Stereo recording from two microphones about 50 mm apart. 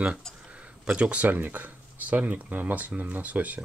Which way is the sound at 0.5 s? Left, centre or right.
Right.